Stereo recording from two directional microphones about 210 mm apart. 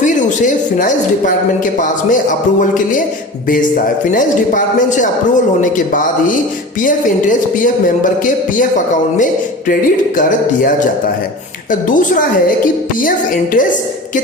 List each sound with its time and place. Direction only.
0.0 s speech: 35° left (ahead or behind)
4.1 s speech: 40° left (ahead or behind)
10.2 s speech: 40° left (ahead or behind)